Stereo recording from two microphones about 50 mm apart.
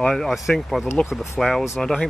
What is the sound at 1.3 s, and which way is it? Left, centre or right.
Speech, centre.